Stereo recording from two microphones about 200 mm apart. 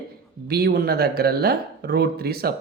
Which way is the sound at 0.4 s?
50° right (ahead or behind).